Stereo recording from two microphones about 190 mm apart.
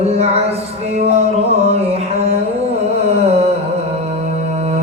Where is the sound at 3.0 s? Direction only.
35° right (ahead or behind).